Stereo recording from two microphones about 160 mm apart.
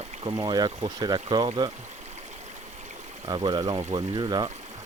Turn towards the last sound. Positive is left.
turn(degrees=-25)  # may be behind; listen again after turning